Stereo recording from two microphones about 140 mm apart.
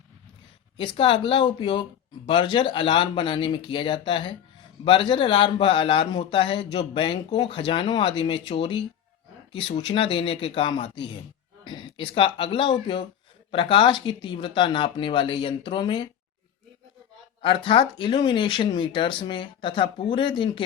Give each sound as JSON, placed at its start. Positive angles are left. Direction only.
{"t": 0.8, "sound": "speech", "side_deg": 35}
{"t": 17.4, "sound": "speech", "side_deg": 35}